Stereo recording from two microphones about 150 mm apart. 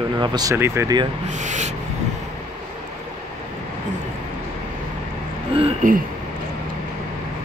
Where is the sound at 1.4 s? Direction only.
55° right (ahead or behind).